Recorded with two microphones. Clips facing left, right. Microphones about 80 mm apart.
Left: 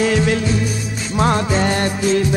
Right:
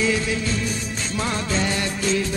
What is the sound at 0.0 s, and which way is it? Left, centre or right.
Music, left.